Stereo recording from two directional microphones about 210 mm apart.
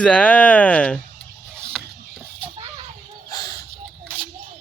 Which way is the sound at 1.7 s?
Centre (ahead or behind).